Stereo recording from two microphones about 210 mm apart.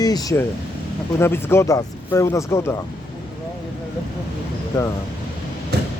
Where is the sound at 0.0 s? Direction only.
20° left (ahead or behind).